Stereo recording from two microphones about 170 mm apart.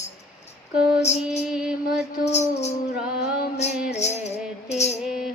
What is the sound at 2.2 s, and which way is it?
Music, 40° left (ahead or behind).